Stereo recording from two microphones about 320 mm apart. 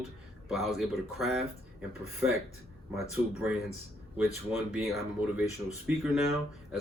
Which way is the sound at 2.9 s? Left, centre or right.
Centre.